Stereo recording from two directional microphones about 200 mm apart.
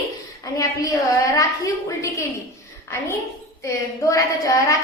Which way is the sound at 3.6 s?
15° left (ahead or behind).